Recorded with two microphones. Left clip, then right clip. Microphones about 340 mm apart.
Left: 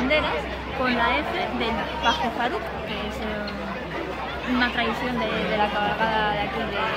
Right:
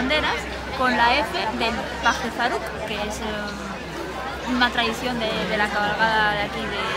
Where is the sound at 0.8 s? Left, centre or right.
Centre.